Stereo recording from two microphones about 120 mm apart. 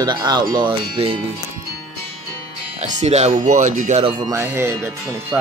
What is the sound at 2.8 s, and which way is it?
Speech, 70° right (ahead or behind).